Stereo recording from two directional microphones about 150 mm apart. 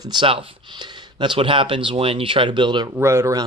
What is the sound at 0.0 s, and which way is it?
Speech, 30° right (ahead or behind).